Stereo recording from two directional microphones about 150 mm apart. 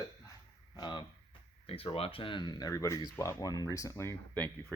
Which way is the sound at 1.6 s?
40° left (ahead or behind).